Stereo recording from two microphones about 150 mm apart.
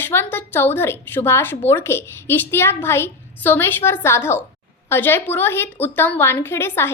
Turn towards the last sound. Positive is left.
turn(degrees=15)  # may be behind; listen again after turning